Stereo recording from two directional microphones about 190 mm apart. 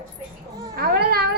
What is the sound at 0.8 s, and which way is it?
Speech, 55° right (ahead or behind).